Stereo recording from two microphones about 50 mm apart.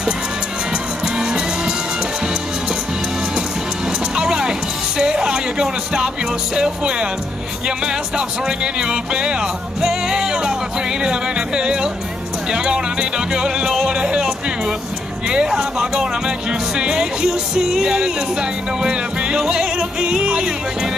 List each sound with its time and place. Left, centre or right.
1.0 s music: centre
4.1 s music: centre
6.5 s speech: centre